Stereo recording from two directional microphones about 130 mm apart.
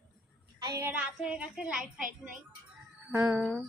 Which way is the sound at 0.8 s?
15° right (ahead or behind).